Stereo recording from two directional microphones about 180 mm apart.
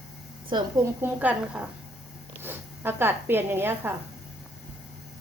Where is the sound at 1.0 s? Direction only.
10° right (ahead or behind).